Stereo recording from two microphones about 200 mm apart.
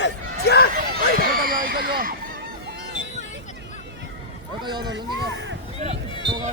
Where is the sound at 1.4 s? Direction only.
45° right (ahead or behind).